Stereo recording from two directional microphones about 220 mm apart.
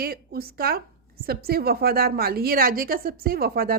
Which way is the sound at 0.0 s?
45° right (ahead or behind).